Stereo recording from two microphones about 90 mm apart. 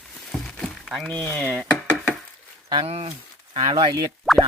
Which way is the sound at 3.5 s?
55° right (ahead or behind).